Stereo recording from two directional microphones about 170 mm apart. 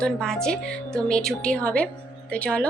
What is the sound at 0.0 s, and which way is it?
Speech, 5° left (ahead or behind).